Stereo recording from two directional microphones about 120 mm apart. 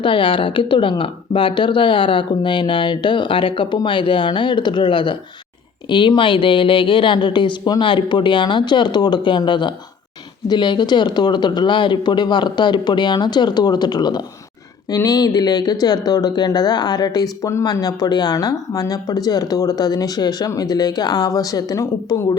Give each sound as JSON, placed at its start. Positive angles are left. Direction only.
{"t": 0.0, "sound": "speech", "side_deg": 45}